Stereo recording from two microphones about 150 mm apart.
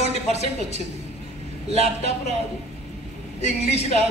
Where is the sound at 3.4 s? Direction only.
45° left (ahead or behind).